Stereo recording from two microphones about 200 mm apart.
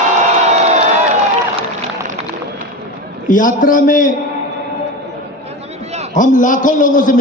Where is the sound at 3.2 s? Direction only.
40° left (ahead or behind).